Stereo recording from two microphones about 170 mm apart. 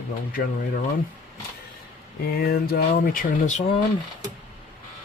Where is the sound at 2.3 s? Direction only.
65° left (ahead or behind).